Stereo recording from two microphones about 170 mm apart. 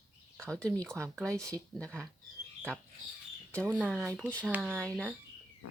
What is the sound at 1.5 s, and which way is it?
Speech, 5° left (ahead or behind).